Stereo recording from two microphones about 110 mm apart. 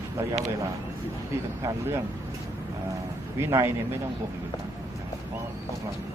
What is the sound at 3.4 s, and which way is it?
Speech, 25° right (ahead or behind).